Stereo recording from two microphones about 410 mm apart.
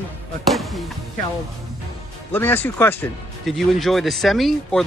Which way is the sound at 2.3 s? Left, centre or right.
Centre.